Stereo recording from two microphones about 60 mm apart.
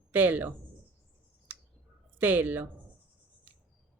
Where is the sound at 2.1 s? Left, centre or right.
Right.